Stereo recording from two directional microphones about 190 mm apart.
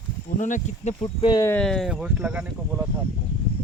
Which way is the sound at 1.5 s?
5° left (ahead or behind).